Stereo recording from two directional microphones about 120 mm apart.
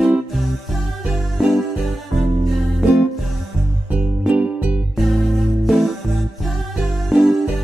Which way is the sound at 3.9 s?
10° right (ahead or behind).